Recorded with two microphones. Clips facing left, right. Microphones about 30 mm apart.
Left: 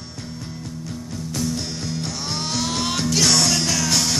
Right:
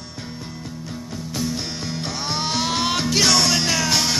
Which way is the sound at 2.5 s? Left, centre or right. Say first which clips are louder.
Right 2 dB; centre.